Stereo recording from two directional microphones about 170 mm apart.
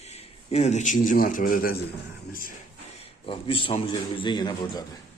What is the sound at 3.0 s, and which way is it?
A man's voice, 30° left (ahead or behind).